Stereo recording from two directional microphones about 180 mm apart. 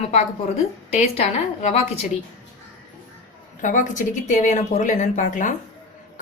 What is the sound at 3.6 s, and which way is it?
A woman's voice, 45° left (ahead or behind).